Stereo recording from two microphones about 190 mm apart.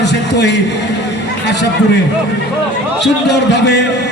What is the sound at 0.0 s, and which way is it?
Speech, 65° left (ahead or behind).